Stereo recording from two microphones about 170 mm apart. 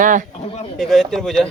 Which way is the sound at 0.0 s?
50° right (ahead or behind).